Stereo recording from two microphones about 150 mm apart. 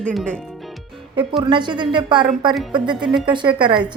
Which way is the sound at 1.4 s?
30° right (ahead or behind).